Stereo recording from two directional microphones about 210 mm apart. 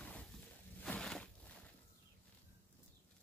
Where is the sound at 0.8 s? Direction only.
5° left (ahead or behind).